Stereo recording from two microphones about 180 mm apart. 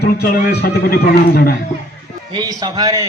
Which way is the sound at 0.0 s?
60° left (ahead or behind).